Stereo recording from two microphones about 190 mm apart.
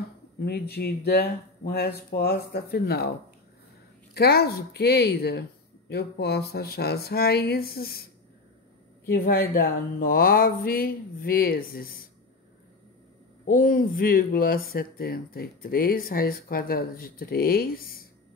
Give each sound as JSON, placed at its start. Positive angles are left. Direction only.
{"t": 0.5, "sound": "speech", "side_deg": 55}
{"t": 4.1, "sound": "speech", "side_deg": 55}
{"t": 13.5, "sound": "speech", "side_deg": 45}